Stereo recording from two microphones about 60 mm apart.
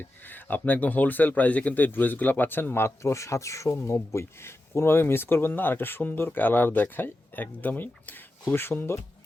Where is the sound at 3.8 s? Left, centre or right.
Left.